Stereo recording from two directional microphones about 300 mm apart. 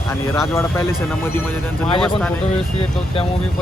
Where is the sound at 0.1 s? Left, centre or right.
Centre.